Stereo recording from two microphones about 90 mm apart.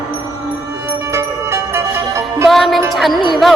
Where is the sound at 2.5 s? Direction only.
Centre (ahead or behind).